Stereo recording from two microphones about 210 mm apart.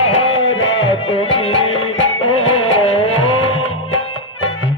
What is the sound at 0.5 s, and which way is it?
Music, 65° left (ahead or behind).